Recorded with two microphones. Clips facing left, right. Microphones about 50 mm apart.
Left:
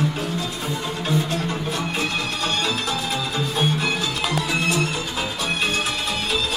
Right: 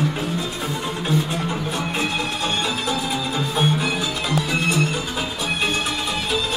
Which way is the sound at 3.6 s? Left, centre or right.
Centre.